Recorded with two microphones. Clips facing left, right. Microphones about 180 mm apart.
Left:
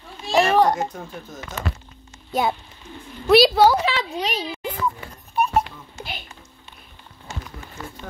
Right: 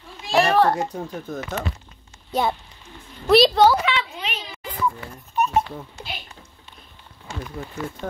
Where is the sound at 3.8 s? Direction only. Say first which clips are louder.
Left 2 dB; 40° left (ahead or behind).